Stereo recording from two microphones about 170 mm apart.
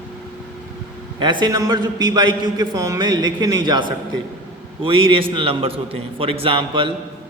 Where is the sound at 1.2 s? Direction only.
25° right (ahead or behind).